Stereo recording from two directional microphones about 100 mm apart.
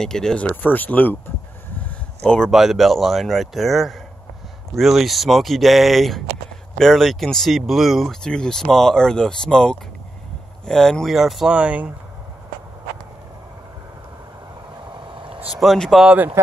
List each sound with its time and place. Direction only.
0.0 s speech: 5° left (ahead or behind)
1.8 s a sound: 10° left (ahead or behind)
2.5 s speech: centre (ahead or behind)
15.2 s vehicle: 65° right (ahead or behind)
15.6 s speech: centre (ahead or behind)